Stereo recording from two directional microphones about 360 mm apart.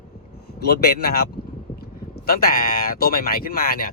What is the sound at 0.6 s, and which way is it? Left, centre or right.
Speech, left.